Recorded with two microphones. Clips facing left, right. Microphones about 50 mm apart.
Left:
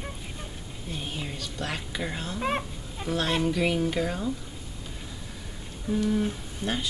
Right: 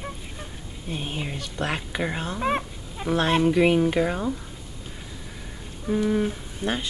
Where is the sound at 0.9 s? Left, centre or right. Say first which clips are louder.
Right 4 dB; right.